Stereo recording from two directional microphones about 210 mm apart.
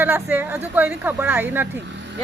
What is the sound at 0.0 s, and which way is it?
Speech, 10° right (ahead or behind).